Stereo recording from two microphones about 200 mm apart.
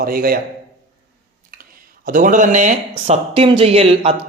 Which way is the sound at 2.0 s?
40° right (ahead or behind).